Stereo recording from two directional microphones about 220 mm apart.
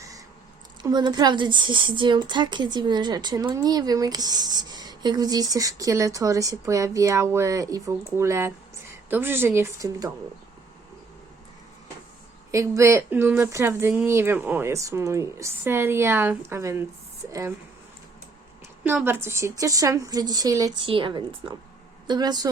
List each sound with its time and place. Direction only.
0.8 s a woman's voice: 20° right (ahead or behind)
12.5 s a woman's voice: 15° right (ahead or behind)
18.9 s a woman's voice: 10° right (ahead or behind)